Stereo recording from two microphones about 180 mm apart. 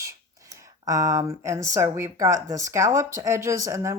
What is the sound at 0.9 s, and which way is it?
A woman's voice, 20° right (ahead or behind).